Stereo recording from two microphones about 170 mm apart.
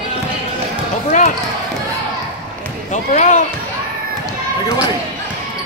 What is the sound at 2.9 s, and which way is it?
Speech, 45° left (ahead or behind).